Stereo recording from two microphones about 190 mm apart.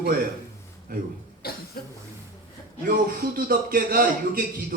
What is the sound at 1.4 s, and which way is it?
Cough, 55° left (ahead or behind).